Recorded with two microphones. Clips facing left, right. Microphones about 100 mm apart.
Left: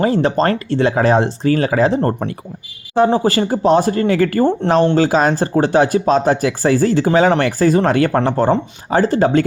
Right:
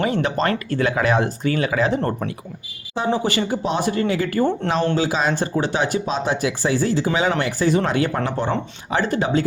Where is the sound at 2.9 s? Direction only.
50° left (ahead or behind).